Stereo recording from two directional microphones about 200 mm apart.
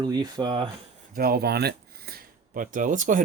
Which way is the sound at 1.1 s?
50° right (ahead or behind).